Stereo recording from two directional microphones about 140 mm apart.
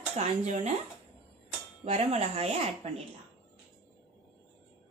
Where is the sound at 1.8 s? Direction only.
55° right (ahead or behind).